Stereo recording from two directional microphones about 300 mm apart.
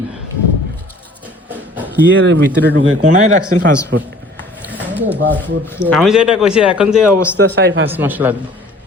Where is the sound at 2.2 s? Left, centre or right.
Right.